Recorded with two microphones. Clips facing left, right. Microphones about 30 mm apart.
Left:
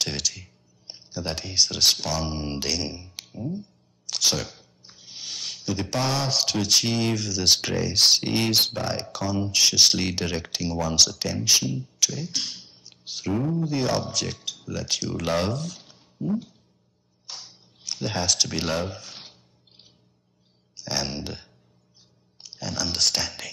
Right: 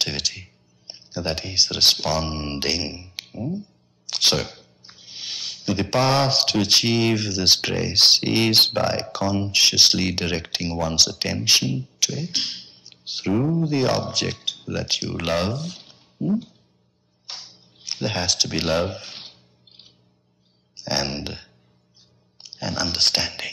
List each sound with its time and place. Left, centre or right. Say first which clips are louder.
0.0 s speech: right 3 dB; right
4.2 s a sound: right 4 dB; right
5.7 s speech: right 6 dB; right
11.2 s speech: right 3 dB; right
11.8 s beatboxing: right 1 dB; right
12.3 s speech: right 4 dB; right
17.3 s music: right 3 dB; right
18.6 s a sound: right 5 dB; right
20.7 s speech: right 4 dB; right